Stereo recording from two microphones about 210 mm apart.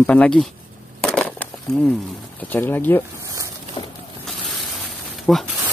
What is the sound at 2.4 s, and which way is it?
Speech, 10° left (ahead or behind).